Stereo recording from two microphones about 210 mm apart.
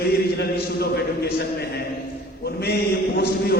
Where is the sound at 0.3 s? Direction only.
50° left (ahead or behind).